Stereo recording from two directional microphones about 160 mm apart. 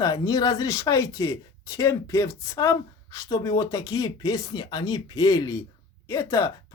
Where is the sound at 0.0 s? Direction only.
25° left (ahead or behind).